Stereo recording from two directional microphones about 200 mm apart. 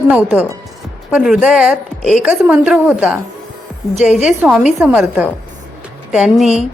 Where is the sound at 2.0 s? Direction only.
35° left (ahead or behind).